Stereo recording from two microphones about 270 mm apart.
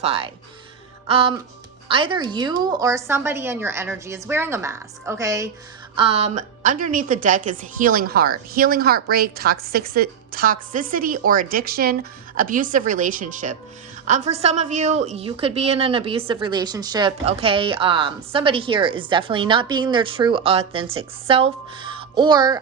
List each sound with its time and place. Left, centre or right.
0.0 s a woman's voice: right
6.0 s a woman's voice: right